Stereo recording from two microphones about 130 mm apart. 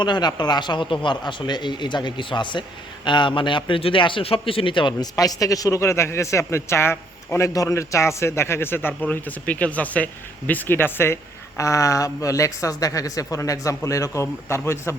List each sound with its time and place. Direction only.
0.0 s a man's voice: 35° left (ahead or behind)